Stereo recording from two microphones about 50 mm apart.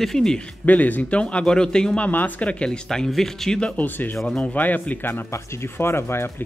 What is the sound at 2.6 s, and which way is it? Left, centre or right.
Speech, centre.